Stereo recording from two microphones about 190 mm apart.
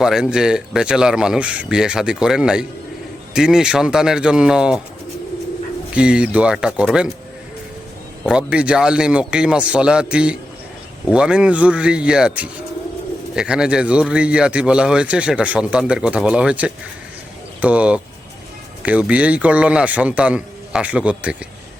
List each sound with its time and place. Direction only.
0.0 s a man's voice: centre (ahead or behind)
5.9 s a man's voice: 5° right (ahead or behind)
8.2 s a man's voice: 5° right (ahead or behind)